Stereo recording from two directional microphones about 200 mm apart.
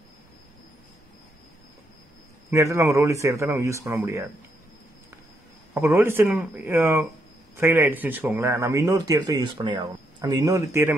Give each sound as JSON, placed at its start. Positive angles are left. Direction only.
{"t": 2.5, "sound": "speech", "side_deg": -15}
{"t": 5.8, "sound": "speech", "side_deg": -10}